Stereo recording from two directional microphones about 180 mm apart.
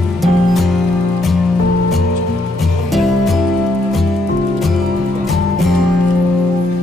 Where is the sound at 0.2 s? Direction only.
Centre (ahead or behind).